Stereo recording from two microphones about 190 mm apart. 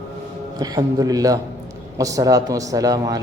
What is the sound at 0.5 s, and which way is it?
A man's voice, 20° right (ahead or behind).